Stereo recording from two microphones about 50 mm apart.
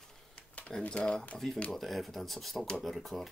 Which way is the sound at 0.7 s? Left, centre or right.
Centre.